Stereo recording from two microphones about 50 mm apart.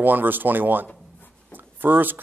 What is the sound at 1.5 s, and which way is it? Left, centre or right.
Writing, right.